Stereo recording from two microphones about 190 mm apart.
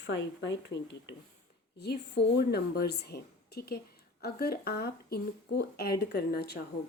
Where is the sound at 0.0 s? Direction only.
70° left (ahead or behind).